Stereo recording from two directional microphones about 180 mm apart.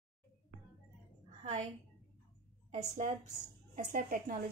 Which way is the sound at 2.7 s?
35° right (ahead or behind).